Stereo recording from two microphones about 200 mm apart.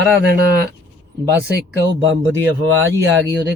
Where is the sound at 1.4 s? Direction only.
60° right (ahead or behind); by 2.8 s 80° right.